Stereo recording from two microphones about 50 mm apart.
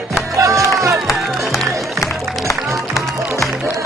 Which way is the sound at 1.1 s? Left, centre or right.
Centre.